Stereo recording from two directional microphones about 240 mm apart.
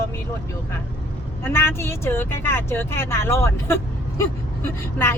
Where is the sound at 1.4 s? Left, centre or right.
Centre.